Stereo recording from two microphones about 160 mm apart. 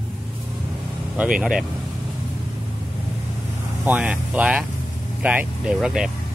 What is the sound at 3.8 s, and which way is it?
Speech, 10° right (ahead or behind).